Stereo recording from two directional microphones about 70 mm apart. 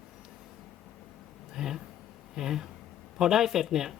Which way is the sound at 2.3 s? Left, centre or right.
Centre.